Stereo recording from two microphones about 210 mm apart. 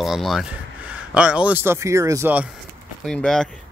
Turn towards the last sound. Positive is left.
turn(degrees=5)  # may be behind; listen again after turning